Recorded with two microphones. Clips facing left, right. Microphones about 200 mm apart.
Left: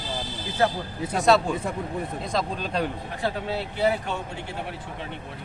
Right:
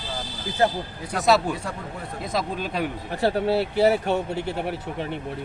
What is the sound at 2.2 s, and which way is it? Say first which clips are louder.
Speech: right 5 dB; 5° right (ahead or behind).